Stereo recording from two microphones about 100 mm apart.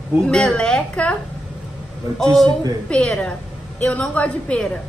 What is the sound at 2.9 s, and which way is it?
A woman's voice, 10° left (ahead or behind).